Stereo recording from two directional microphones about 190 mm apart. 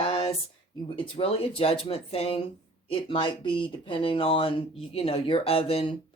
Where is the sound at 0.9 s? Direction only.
25° left (ahead or behind).